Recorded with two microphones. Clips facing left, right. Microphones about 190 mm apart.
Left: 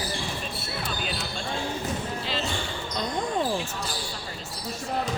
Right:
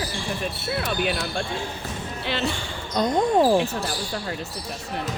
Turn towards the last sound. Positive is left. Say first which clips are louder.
# right 9 dB
turn(degrees=-65)  # may be behind; listen again after turning